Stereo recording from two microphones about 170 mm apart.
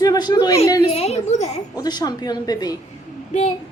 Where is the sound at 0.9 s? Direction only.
40° left (ahead or behind).